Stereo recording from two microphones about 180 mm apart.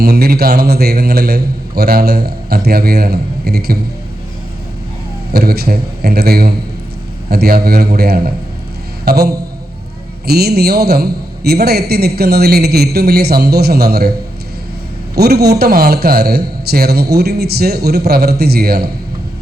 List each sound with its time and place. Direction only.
0.0 s a man's voice: 60° right (ahead or behind)
5.3 s a man's voice: 60° right (ahead or behind)
15.1 s a man's voice: 60° right (ahead or behind)